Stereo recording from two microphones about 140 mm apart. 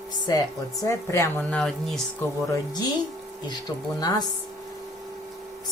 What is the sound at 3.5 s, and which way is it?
Speech, 30° left (ahead or behind).